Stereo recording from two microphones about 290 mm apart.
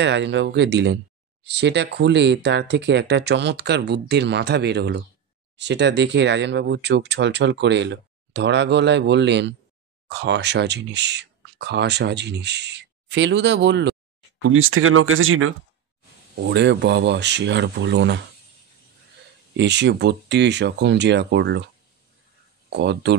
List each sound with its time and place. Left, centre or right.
0.0 s speech: right
19.5 s speech: right
22.7 s speech: right